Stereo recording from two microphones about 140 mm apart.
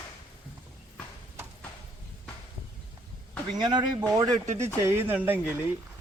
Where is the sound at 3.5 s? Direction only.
30° right (ahead or behind).